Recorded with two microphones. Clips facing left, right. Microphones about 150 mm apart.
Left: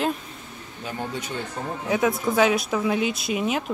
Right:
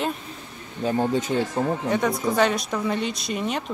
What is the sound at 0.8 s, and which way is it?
Speech, 30° right (ahead or behind).